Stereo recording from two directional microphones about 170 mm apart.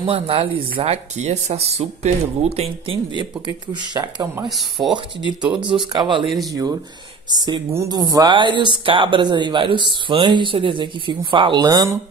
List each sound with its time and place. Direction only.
0.0 s speech: 30° right (ahead or behind)
3.2 s speech: 25° right (ahead or behind)
4.5 s speech: centre (ahead or behind)
5.5 s speech: 25° right (ahead or behind)